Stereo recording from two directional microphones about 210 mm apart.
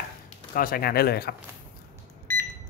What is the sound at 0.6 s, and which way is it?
Speech, 45° left (ahead or behind).